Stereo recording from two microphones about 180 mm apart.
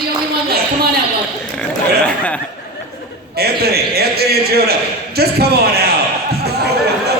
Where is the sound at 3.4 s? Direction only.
60° right (ahead or behind).